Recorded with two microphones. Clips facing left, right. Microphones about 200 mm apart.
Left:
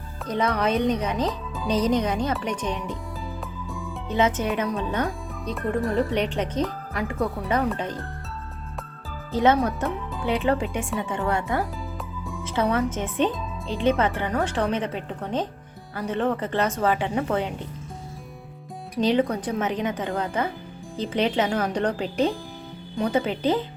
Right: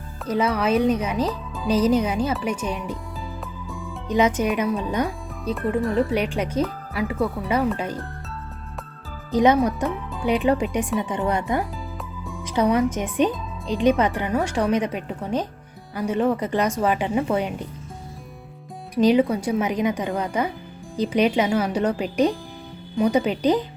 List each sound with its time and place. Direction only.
0.3 s speech: 5° right (ahead or behind)
3.7 s music: centre (ahead or behind)
4.1 s speech: 15° right (ahead or behind)
5.5 s speech: centre (ahead or behind)
9.3 s speech: 15° right (ahead or behind)
18.9 s speech: 10° right (ahead or behind)